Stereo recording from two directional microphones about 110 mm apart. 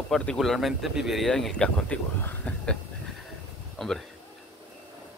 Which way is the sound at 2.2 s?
15° left (ahead or behind).